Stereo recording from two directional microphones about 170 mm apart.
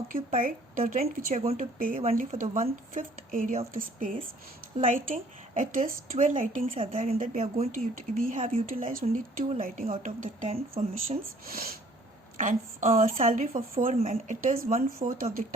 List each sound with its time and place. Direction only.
0.1 s speech: 55° right (ahead or behind)
1.4 s a woman's voice: 40° right (ahead or behind)
7.9 s a woman's voice: 55° right (ahead or behind)
8.4 s speech: 35° right (ahead or behind)
8.9 s a woman's voice: 55° right (ahead or behind)
11.4 s speech: 60° right (ahead or behind)
12.4 s a woman's voice: 50° right (ahead or behind)